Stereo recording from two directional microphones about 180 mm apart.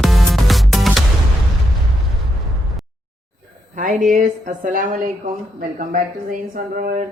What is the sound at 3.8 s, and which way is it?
A woman's voice, 45° right (ahead or behind).